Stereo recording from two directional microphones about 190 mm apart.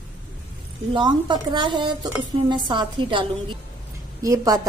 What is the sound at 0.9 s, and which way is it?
A woman's voice, 25° right (ahead or behind).